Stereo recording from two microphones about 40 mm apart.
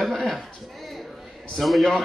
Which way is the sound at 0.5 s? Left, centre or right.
Centre.